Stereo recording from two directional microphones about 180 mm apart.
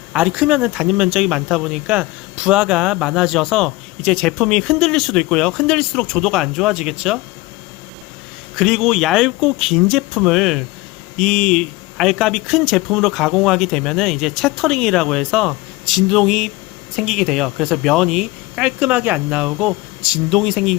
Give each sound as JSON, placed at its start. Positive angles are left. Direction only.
{"t": 0.1, "sound": "speech", "side_deg": -5}
{"t": 8.5, "sound": "speech", "side_deg": 0}